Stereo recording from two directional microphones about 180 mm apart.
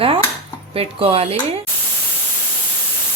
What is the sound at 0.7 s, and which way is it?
Speech, 30° right (ahead or behind).